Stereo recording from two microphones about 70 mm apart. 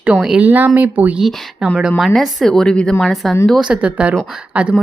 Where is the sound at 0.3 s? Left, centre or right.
Right.